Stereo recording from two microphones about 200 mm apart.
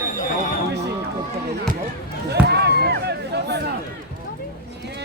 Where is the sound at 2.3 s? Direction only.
55° right (ahead or behind).